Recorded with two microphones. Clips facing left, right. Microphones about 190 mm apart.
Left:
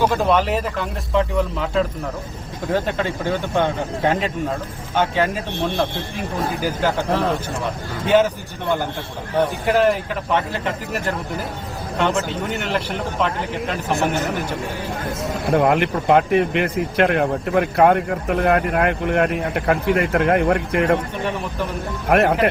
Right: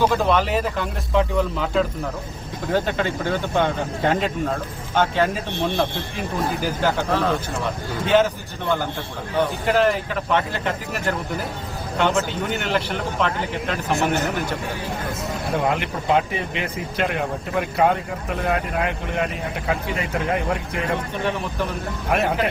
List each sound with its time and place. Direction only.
0.0 s speech: 10° left (ahead or behind)
0.6 s a man's voice: centre (ahead or behind)
4.9 s speech: 10° left (ahead or behind)
7.1 s speech: 30° left (ahead or behind)
8.0 s speech: 10° left (ahead or behind)
9.9 s a man's voice: centre (ahead or behind)
15.5 s speech: 60° left (ahead or behind); by 21.0 s 75° left (ahead or behind)
22.1 s speech: 60° left (ahead or behind)